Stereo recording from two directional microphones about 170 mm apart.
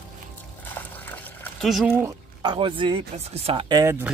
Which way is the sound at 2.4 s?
30° right (ahead or behind).